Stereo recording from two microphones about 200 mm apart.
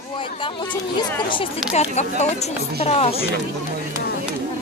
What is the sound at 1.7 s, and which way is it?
Speech, 35° left (ahead or behind).